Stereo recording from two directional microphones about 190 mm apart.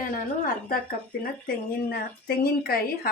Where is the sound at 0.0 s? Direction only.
50° left (ahead or behind).